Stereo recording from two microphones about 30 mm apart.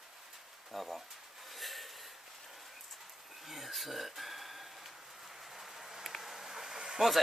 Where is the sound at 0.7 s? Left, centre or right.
Centre.